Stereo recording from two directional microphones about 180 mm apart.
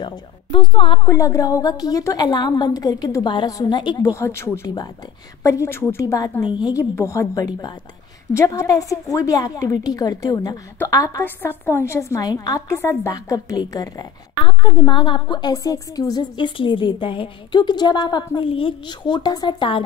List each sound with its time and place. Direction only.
0.0 s a woman's voice: 25° left (ahead or behind)